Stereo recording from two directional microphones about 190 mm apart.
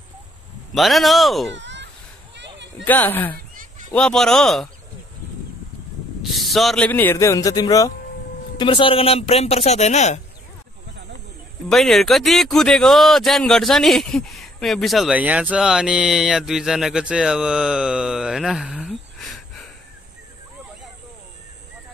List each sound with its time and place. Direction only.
0.7 s speech: centre (ahead or behind)
1.5 s a sound: 70° right (ahead or behind)
2.8 s a man's voice: 10° left (ahead or behind)
6.3 s a man's voice: centre (ahead or behind); by 10.2 s 35° left (ahead or behind)
11.7 s speech: centre (ahead or behind)